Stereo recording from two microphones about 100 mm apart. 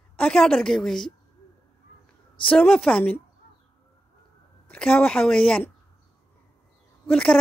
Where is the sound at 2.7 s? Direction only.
15° left (ahead or behind).